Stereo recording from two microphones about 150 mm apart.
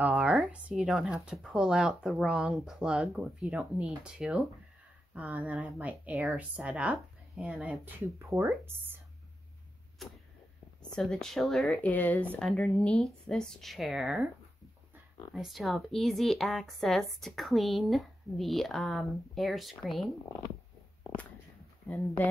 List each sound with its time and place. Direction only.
0.0 s speech: 5° right (ahead or behind)
7.8 s speech: 15° right (ahead or behind)
10.0 s a sound: centre (ahead or behind)
10.8 s speech: 5° left (ahead or behind)
15.3 s speech: centre (ahead or behind)